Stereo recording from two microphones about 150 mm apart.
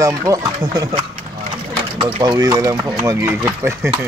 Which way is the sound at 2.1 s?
30° right (ahead or behind).